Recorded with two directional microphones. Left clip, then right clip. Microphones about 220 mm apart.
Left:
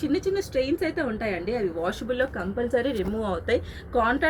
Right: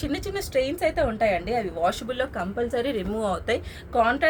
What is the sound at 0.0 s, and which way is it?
A woman's voice, 50° right (ahead or behind).